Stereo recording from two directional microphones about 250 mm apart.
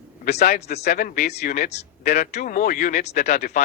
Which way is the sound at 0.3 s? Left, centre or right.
Left.